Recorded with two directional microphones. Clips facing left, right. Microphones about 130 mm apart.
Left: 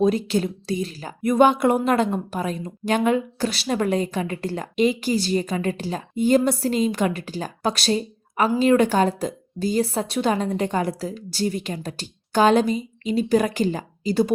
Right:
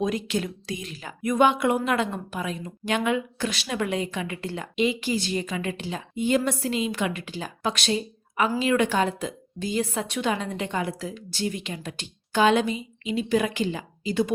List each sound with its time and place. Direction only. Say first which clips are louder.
0.0 s a woman's voice: left 6 dB; 35° left (ahead or behind)